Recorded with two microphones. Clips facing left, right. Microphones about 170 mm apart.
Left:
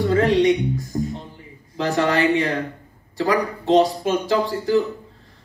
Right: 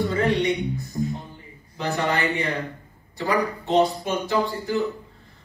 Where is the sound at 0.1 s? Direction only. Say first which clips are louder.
Left 6 dB; 90° left.